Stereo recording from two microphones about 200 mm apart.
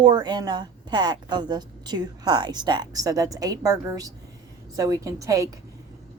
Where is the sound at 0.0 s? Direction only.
20° right (ahead or behind).